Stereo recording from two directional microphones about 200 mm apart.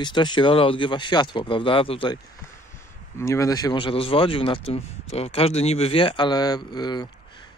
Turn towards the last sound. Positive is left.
turn(degrees=20)  # may be behind; listen again after turning